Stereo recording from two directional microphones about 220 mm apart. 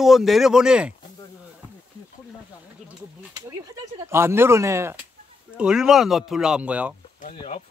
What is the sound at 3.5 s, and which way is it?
Speech, 15° right (ahead or behind).